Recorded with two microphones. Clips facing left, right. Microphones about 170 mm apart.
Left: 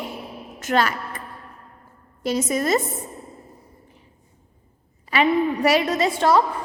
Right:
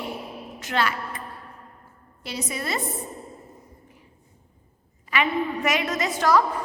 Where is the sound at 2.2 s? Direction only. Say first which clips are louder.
Left 9 dB; 45° left (ahead or behind).